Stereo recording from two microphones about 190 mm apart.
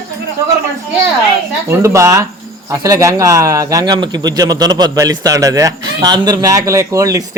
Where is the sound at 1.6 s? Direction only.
15° right (ahead or behind).